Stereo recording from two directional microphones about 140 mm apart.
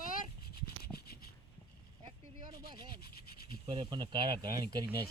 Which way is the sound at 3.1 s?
90° left.